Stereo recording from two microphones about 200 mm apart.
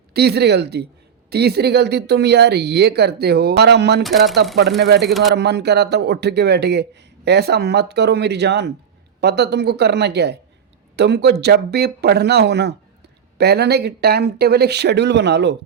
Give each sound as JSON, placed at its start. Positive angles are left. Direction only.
{"t": 0.1, "sound": "speech", "side_deg": -55}
{"t": 4.0, "sound": "speech", "side_deg": 0}
{"t": 4.8, "sound": "speech", "side_deg": -55}
{"t": 5.0, "sound": "speech", "side_deg": 0}
{"t": 5.3, "sound": "speech", "side_deg": -60}